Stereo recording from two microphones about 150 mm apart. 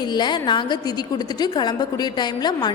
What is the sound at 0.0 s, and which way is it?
A woman's voice, 30° left (ahead or behind).